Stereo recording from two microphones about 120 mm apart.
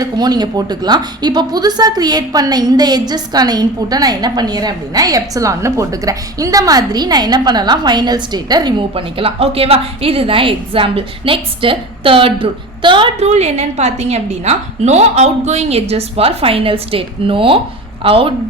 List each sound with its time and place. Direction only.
0.0 s a woman's voice: 35° right (ahead or behind)
9.0 s a woman's voice: 50° right (ahead or behind)
13.1 s a woman's voice: 65° right (ahead or behind)